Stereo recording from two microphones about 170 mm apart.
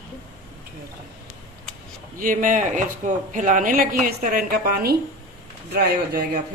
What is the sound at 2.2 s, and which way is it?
Speech, 55° right (ahead or behind).